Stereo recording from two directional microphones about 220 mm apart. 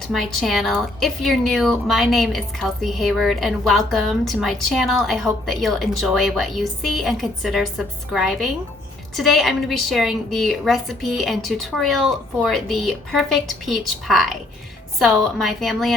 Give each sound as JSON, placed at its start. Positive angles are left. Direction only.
{"t": 0.1, "sound": "a woman's voice", "side_deg": 0}